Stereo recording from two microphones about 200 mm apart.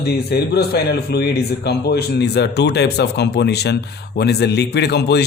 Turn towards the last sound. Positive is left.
turn(degrees=55)  # may be behind; listen again after turning